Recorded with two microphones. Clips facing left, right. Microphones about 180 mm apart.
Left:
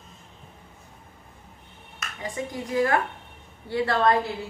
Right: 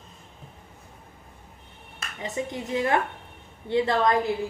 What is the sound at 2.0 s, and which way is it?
A woman's voice, 25° right (ahead or behind).